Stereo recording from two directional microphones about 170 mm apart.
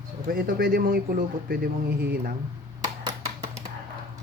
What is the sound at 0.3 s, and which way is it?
A man's voice, 60° right (ahead or behind).